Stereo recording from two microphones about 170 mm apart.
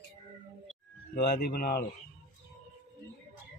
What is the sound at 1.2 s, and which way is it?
Speech, 65° left (ahead or behind).